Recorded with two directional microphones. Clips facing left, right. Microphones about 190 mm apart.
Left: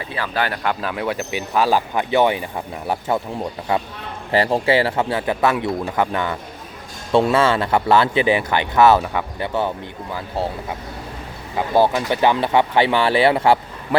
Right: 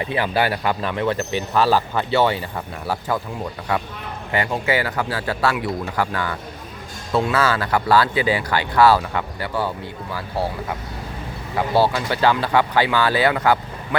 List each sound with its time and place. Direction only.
0.0 s speech: 20° right (ahead or behind); by 10.4 s 20° left (ahead or behind)
11.5 s speech: 20° left (ahead or behind)